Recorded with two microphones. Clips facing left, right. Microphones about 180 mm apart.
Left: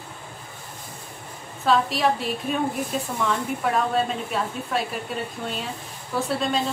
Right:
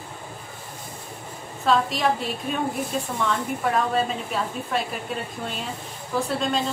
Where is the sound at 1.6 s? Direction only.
Centre (ahead or behind).